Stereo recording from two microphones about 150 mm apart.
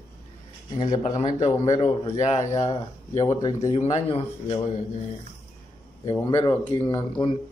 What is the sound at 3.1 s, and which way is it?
Speech, 25° left (ahead or behind).